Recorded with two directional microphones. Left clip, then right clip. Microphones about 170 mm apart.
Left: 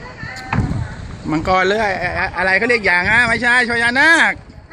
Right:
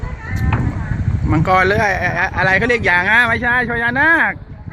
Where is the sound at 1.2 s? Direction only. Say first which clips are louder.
Right 1 dB; centre (ahead or behind).